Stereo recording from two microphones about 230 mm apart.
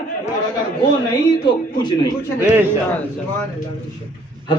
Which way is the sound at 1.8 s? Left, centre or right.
Centre.